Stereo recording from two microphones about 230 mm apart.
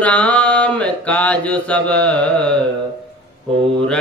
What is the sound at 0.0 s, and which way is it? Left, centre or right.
Mantra, centre.